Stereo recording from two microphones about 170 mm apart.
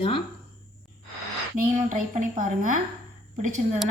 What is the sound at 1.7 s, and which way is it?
A woman's voice, 45° right (ahead or behind).